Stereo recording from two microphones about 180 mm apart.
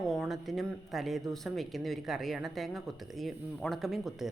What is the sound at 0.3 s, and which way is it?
A woman's voice, centre (ahead or behind).